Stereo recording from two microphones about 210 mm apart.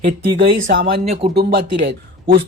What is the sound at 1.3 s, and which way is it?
Speech, 50° right (ahead or behind).